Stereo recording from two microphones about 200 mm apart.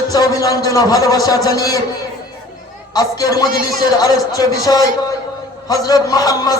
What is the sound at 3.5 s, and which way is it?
Speech, 45° right (ahead or behind).